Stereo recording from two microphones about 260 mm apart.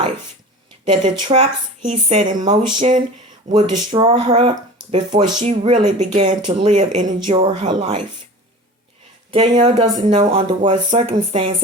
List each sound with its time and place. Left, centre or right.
0.9 s speech: right
9.3 s speech: centre